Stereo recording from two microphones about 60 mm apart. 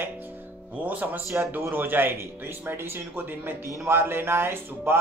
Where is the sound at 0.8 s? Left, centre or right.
Right.